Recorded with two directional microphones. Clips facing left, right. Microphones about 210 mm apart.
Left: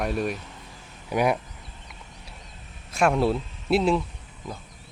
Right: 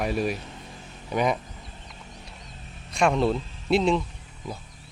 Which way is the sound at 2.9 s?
5° left (ahead or behind).